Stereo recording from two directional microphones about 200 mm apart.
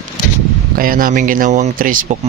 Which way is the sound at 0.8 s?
45° right (ahead or behind).